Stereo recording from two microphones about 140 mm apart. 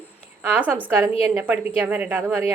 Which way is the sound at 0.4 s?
15° right (ahead or behind).